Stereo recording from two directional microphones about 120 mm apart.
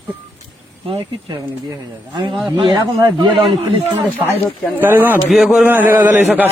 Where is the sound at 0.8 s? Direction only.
45° right (ahead or behind).